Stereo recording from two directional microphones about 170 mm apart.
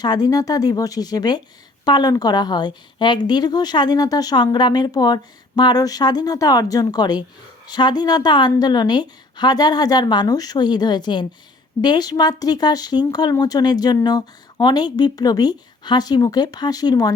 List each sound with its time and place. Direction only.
0.0 s speech: 25° left (ahead or behind)